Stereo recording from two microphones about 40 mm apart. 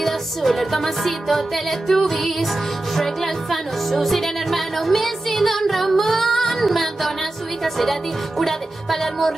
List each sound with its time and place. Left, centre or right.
0.0 s speech: centre